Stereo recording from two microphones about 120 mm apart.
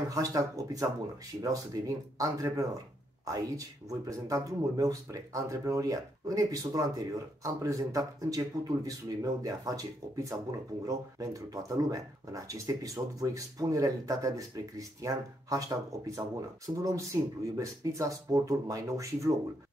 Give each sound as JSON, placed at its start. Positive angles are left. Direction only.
{"t": 0.1, "sound": "speech", "side_deg": -30}